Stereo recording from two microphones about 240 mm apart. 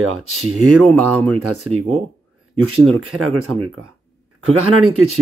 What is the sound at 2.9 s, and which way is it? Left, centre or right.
Speech, right.